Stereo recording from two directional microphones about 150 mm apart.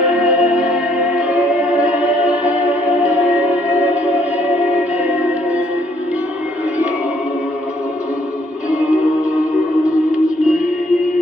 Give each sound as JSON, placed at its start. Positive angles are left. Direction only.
{"t": 0.1, "sound": "music", "side_deg": -5}
{"t": 9.4, "sound": "music", "side_deg": 20}